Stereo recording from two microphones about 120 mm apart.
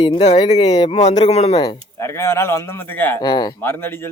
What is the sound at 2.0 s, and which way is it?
A man's voice, 25° left (ahead or behind).